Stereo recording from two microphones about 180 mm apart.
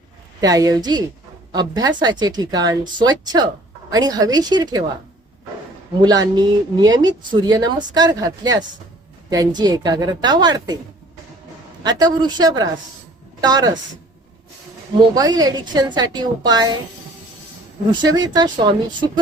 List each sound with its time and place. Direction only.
0.4 s speech: 20° right (ahead or behind)
6.0 s speech: 20° right (ahead or behind)
11.8 s speech: 20° right (ahead or behind)
14.9 s speech: 20° right (ahead or behind)
18.1 s speech: 20° right (ahead or behind)